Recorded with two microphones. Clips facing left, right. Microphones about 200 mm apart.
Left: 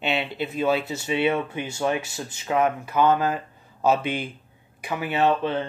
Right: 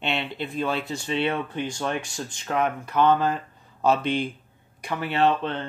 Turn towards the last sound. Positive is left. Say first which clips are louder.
# left 1 dB
turn(degrees=5)  # may be behind; listen again after turning